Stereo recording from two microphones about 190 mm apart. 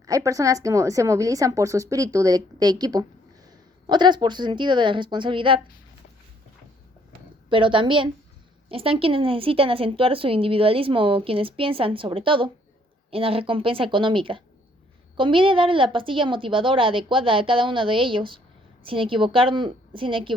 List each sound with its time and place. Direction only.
0.0 s a woman's voice: 15° right (ahead or behind)
7.5 s a woman's voice: 25° right (ahead or behind)